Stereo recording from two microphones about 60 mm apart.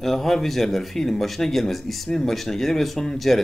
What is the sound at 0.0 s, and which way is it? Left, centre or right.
Speech, centre.